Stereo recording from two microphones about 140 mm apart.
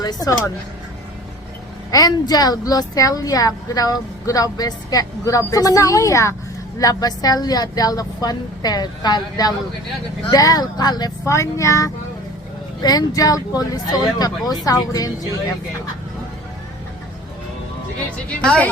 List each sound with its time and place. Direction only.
0.0 s a woman's voice: 30° left (ahead or behind)
1.9 s a woman's voice: 25° left (ahead or behind)
18.3 s a woman's voice: 10° left (ahead or behind)